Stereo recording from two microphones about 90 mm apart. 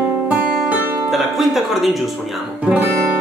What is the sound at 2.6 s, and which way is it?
Guitar, 15° right (ahead or behind).